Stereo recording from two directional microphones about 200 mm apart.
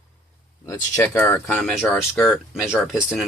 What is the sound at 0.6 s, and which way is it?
Speech, 15° left (ahead or behind).